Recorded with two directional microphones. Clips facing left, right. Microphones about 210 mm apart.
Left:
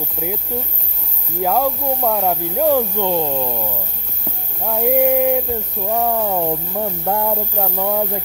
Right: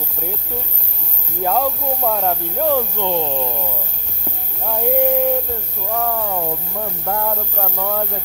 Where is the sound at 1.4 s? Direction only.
5° left (ahead or behind).